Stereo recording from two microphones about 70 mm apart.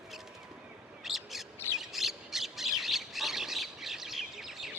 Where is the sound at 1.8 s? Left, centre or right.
Centre.